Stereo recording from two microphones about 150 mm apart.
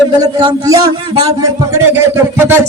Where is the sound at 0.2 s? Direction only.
25° right (ahead or behind).